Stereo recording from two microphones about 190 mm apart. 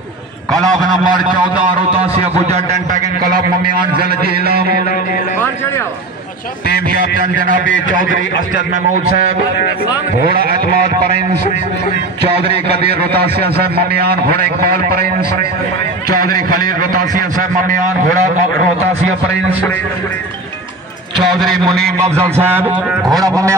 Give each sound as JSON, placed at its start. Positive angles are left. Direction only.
{"t": 0.6, "sound": "a man's voice", "side_deg": -20}
{"t": 1.0, "sound": "a man's voice", "side_deg": -45}
{"t": 2.4, "sound": "a man's voice", "side_deg": -40}
{"t": 4.0, "sound": "a man's voice", "side_deg": -55}
{"t": 4.7, "sound": "music", "side_deg": 45}
{"t": 7.6, "sound": "a man's voice", "side_deg": 75}
{"t": 12.4, "sound": "a man's voice", "side_deg": -55}
{"t": 21.2, "sound": "a man's voice", "side_deg": 0}
{"t": 22.0, "sound": "a sound", "side_deg": -15}
{"t": 23.0, "sound": "a man's voice", "side_deg": -20}